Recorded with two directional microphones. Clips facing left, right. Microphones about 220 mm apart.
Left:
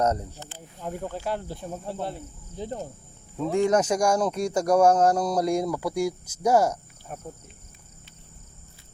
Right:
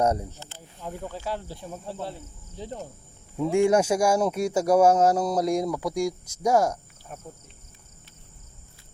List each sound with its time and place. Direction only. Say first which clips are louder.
0.0 s speech: right 1 dB; 10° right (ahead or behind)
0.9 s speech: left 2 dB; 50° left (ahead or behind)
3.5 s speech: right 1 dB; 10° right (ahead or behind)
7.1 s speech: left 3 dB; 50° left (ahead or behind)